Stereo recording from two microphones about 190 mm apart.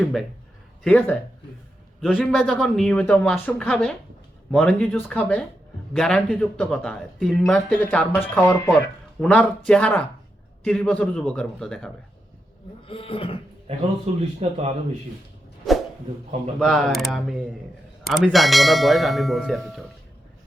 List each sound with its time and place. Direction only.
0.0 s speech: centre (ahead or behind)
12.9 s speech: 30° left (ahead or behind)
13.7 s a man's voice: 30° right (ahead or behind)
16.6 s speech: centre (ahead or behind)